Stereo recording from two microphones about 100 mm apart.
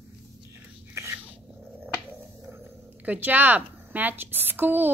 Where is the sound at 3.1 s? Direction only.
15° right (ahead or behind).